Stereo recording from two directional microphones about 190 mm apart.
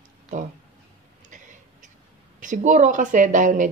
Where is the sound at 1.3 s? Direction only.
40° right (ahead or behind).